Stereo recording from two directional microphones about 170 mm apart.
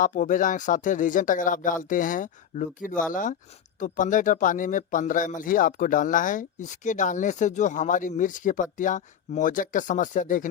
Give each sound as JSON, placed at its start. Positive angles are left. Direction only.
{"t": 0.0, "sound": "speech", "side_deg": 50}